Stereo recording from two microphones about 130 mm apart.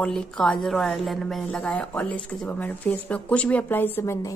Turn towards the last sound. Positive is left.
turn(degrees=25)  # may be behind; listen again after turning